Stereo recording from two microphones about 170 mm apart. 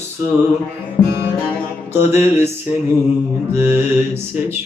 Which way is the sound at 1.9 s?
15° right (ahead or behind).